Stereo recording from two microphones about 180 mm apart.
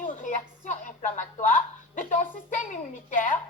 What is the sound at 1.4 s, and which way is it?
Hiccup, 45° left (ahead or behind).